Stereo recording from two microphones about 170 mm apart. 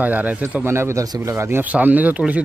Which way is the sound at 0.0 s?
10° right (ahead or behind).